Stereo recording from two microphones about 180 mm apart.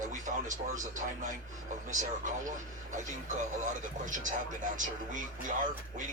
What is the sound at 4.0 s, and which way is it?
A man's voice, 45° right (ahead or behind).